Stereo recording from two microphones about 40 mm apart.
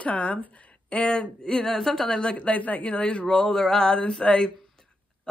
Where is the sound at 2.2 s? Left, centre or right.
Left.